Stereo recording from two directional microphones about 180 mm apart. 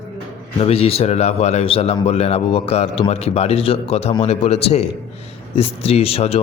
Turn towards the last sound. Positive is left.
turn(degrees=35)  # may be behind; listen again after turning